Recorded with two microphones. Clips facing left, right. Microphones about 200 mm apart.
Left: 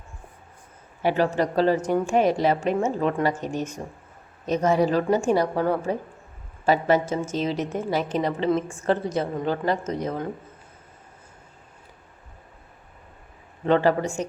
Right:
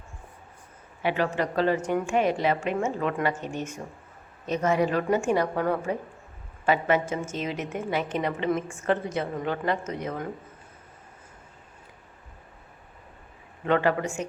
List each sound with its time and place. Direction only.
1.0 s a woman's voice: 40° left (ahead or behind)
13.7 s a woman's voice: 30° left (ahead or behind)